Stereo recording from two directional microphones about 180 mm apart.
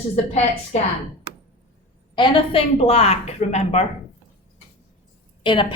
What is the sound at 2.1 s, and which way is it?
A woman's voice, 25° left (ahead or behind).